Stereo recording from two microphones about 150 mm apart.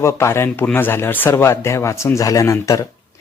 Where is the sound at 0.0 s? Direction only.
20° left (ahead or behind).